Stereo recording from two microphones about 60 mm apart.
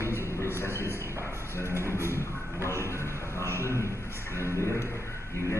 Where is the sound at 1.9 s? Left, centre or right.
Right.